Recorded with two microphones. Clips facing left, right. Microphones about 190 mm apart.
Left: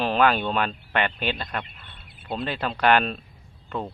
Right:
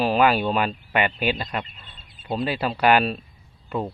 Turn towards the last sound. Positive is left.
turn(degrees=-10)  # may be behind; listen again after turning